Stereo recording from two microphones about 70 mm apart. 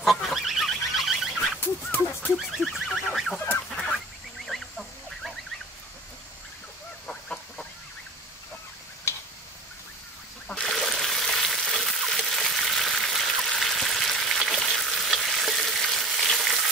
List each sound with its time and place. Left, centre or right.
0.0 s goose: centre
1.6 s dog: left
2.6 s goose: centre
4.5 s fowl: centre
7.1 s a sound: centre
10.6 s frying: centre